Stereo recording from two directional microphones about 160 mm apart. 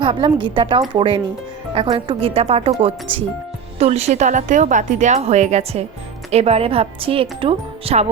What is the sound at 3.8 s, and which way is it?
Speech, 40° right (ahead or behind).